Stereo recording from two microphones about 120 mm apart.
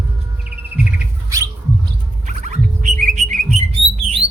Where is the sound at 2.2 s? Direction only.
90° right.